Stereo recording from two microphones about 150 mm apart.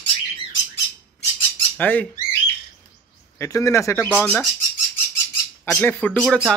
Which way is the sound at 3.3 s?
20° left (ahead or behind).